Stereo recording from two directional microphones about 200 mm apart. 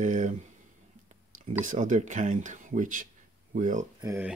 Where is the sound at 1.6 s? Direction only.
40° right (ahead or behind).